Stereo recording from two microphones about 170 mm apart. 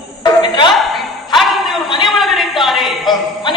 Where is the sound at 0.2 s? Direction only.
25° left (ahead or behind).